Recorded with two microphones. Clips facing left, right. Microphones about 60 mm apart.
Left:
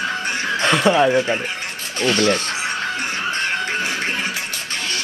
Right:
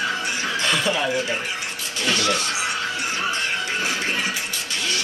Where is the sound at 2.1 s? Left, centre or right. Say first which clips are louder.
Left 4 dB; left.